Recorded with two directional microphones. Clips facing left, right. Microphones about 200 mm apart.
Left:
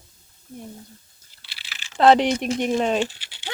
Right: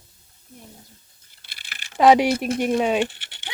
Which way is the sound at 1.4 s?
50° right (ahead or behind).